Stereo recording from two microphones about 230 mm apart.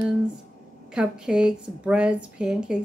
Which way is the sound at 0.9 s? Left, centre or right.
Centre.